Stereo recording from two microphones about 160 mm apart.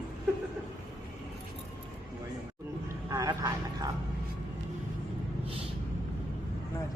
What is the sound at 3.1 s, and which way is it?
Vehicle, 20° right (ahead or behind).